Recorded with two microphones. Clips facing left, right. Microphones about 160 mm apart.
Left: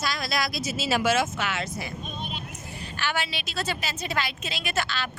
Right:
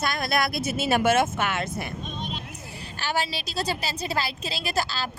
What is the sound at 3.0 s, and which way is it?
A woman's voice, 40° right (ahead or behind).